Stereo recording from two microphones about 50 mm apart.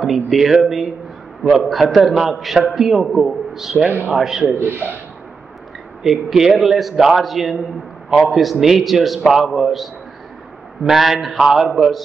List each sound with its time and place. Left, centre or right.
0.0 s a man's voice: centre
4.6 s speech: right
6.0 s a man's voice: centre